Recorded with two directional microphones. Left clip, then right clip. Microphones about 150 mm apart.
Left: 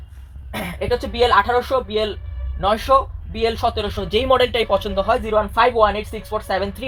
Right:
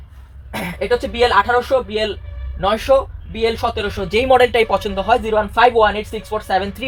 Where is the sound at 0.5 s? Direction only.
25° right (ahead or behind).